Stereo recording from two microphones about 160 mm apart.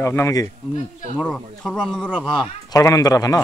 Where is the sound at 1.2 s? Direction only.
5° left (ahead or behind).